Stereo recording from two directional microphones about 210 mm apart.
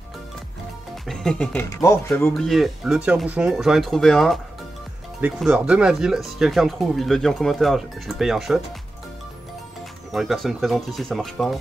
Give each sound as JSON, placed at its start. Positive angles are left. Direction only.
{"t": 1.0, "sound": "speech", "side_deg": 0}
{"t": 10.1, "sound": "speech", "side_deg": 0}